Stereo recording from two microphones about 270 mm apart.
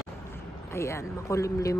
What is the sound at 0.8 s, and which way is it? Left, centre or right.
Speech, centre.